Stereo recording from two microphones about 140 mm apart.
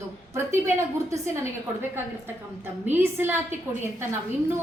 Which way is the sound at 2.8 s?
15° right (ahead or behind).